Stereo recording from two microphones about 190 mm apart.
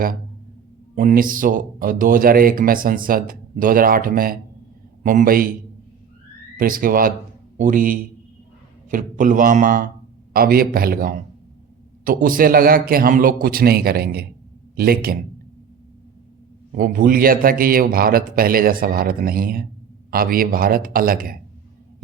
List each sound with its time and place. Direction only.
0.9 s speech: 45° right (ahead or behind)
6.6 s speech: 50° right (ahead or behind)
16.7 s speech: 45° right (ahead or behind)